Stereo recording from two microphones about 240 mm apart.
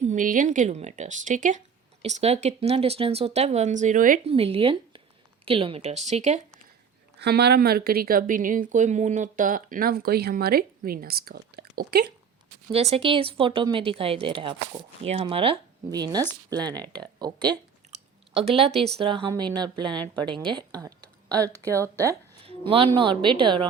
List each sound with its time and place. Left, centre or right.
0.0 s speech: right
7.2 s speech: right
12.7 s speech: right
16.6 s speech: centre
17.2 s speech: centre
17.9 s a sound: right
18.9 s speech: right
21.5 s speech: centre
22.4 s speech: right